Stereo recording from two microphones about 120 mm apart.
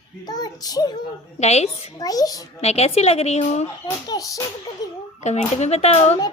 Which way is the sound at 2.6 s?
60° left (ahead or behind).